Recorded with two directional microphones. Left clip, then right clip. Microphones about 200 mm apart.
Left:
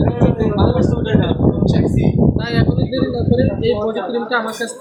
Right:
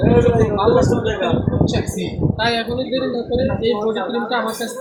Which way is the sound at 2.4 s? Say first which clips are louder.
Right 1 dB; 25° left (ahead or behind).